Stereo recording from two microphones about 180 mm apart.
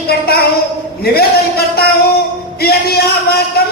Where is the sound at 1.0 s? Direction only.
60° left (ahead or behind).